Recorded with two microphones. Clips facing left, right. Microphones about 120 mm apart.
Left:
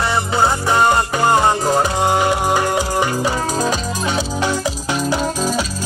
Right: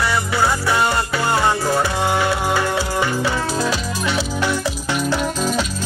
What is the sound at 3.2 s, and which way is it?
Music, 40° left (ahead or behind).